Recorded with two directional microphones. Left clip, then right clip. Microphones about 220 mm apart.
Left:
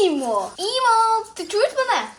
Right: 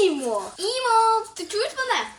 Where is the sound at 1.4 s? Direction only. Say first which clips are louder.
Left 10 dB; 25° left (ahead or behind).